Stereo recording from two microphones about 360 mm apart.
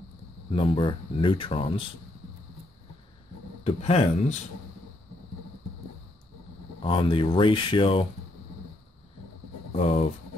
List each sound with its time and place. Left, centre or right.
0.5 s speech: centre
3.6 s speech: centre
6.8 s speech: centre
9.8 s speech: centre